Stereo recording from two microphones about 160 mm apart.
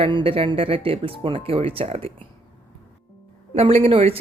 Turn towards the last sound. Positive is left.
turn(degrees=-40)  # may be behind; listen again after turning